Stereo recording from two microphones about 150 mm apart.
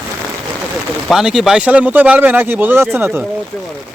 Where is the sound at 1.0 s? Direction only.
5° right (ahead or behind).